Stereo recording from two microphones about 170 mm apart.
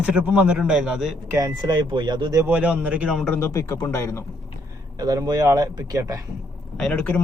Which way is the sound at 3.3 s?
15° left (ahead or behind).